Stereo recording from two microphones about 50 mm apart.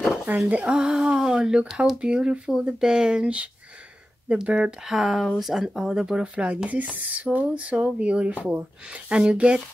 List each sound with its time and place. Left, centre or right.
0.5 s speech: right
0.7 s speech: centre
4.5 s speech: centre
6.2 s speech: right